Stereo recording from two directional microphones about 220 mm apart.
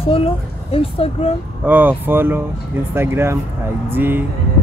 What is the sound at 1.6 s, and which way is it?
Speech, 10° right (ahead or behind).